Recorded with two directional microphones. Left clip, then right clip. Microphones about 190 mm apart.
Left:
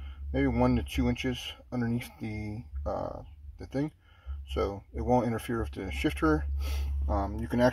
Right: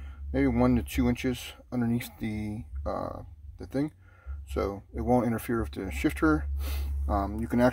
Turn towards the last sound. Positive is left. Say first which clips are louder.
# right 1 dB
turn(degrees=-10)  # may be behind; listen again after turning